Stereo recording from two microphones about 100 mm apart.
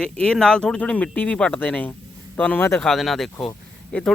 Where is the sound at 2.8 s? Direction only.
Centre (ahead or behind).